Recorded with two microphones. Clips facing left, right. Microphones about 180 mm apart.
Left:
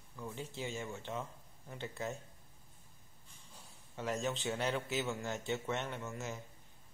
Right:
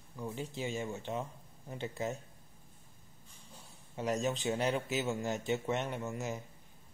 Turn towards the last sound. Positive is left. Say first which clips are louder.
# right 4 dB
turn(degrees=-15)  # may be behind; listen again after turning